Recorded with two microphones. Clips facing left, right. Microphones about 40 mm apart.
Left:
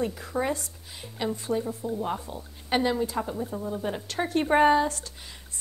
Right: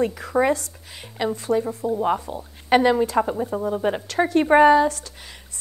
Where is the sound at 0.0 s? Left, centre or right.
Right.